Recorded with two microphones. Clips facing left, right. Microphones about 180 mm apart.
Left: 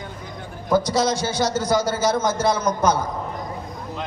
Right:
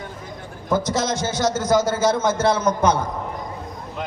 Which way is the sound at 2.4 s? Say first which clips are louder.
Right 2 dB; 25° right (ahead or behind).